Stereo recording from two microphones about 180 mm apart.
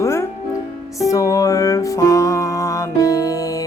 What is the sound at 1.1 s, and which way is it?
Music, 20° left (ahead or behind).